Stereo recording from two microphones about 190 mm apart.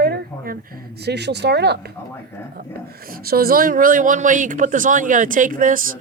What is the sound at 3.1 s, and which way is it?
Speech, 50° right (ahead or behind).